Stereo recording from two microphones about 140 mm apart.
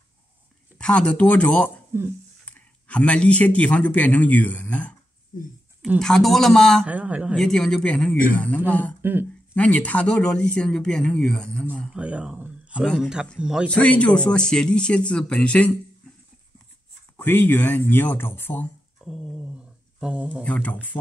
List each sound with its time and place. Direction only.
0.7 s speech: 5° left (ahead or behind)
1.9 s speech: 20° right (ahead or behind)
2.4 s a man's voice: 10° left (ahead or behind)
5.3 s speech: 75° left (ahead or behind)
5.9 s speech: 5° left (ahead or behind)
6.9 s speech: 10° right (ahead or behind)
7.3 s speech: 5° left (ahead or behind)
9.0 s a sound: 15° right (ahead or behind)
9.6 s speech: 10° left (ahead or behind)
11.9 s speech: 10° right (ahead or behind)
13.7 s speech: 10° left (ahead or behind)
17.2 s speech: 15° left (ahead or behind)
19.0 s a sound: centre (ahead or behind)
20.4 s speech: 10° left (ahead or behind)